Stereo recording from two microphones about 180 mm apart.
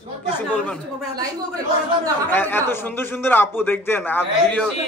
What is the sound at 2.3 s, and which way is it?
A man's voice, 10° left (ahead or behind).